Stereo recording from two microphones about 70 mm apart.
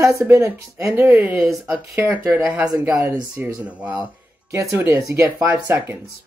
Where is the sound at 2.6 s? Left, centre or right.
Right.